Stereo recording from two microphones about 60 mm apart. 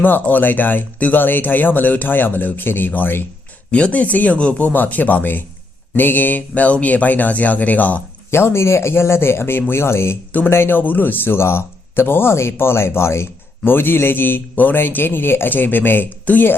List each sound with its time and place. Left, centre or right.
0.0 s speech: left
3.7 s speech: left
8.3 s speech: left
13.7 s speech: left